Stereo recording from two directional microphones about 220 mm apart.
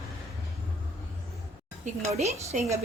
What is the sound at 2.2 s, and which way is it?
Speech, 30° right (ahead or behind).